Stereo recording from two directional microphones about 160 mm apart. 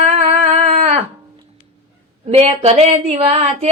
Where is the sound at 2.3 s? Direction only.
40° right (ahead or behind).